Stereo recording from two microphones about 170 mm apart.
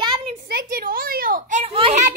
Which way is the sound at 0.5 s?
60° right (ahead or behind).